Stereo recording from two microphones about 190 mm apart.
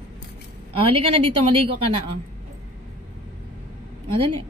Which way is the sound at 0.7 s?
30° right (ahead or behind).